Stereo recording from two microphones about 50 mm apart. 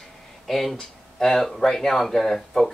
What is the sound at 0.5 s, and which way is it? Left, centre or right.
Speech, centre.